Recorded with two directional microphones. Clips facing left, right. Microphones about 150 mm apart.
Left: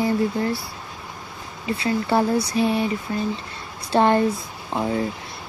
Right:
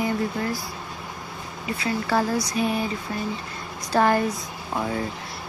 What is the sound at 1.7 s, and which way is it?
Speech, 25° left (ahead or behind).